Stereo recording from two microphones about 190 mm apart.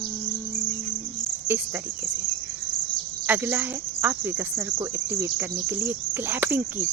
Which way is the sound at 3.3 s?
10° right (ahead or behind).